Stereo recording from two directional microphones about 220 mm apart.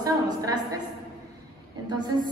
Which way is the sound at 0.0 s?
15° right (ahead or behind).